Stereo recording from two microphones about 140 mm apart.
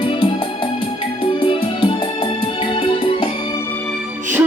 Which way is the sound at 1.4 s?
35° left (ahead or behind).